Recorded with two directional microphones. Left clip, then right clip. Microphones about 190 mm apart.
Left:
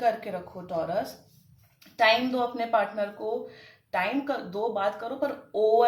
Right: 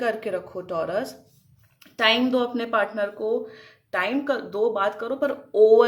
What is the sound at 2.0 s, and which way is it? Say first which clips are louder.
Speech: right 2 dB; 50° right (ahead or behind).